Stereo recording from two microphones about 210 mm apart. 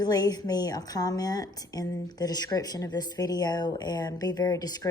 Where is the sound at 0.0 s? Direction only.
20° left (ahead or behind).